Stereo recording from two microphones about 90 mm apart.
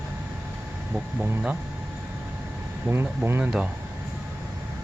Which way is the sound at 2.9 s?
30° right (ahead or behind).